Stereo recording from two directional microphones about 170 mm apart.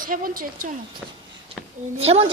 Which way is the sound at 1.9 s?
35° right (ahead or behind).